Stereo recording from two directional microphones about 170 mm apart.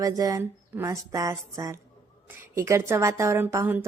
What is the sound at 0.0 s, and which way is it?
A woman's voice, 20° right (ahead or behind).